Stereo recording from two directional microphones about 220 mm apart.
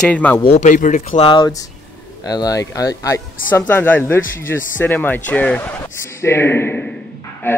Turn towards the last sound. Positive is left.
turn(degrees=10)  # may be behind; listen again after turning